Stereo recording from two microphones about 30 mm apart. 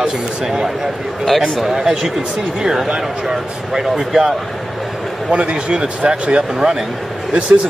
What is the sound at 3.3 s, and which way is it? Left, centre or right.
Speech, centre.